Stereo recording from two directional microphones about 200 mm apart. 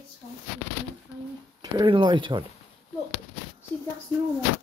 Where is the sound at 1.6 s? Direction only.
20° right (ahead or behind).